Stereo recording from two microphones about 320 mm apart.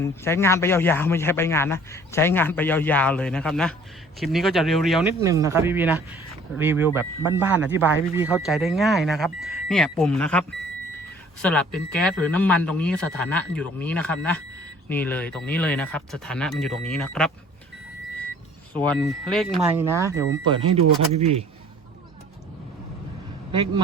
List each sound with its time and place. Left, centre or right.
0.0 s a man's voice: centre
11.4 s speech: centre
18.7 s a man's voice: centre